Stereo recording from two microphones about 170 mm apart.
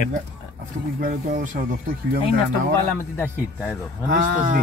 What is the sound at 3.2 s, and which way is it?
Speech, 10° left (ahead or behind).